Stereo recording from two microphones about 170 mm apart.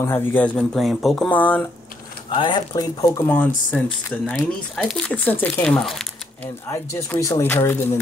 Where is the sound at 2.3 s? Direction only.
25° left (ahead or behind); by 6.5 s centre (ahead or behind).